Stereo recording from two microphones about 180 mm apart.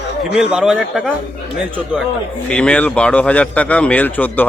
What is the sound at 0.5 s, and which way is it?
Speech, 5° right (ahead or behind).